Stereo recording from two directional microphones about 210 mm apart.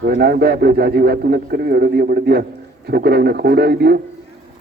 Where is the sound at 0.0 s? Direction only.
50° right (ahead or behind).